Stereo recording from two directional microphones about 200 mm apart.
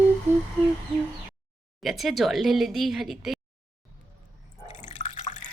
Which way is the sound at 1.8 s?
Centre (ahead or behind).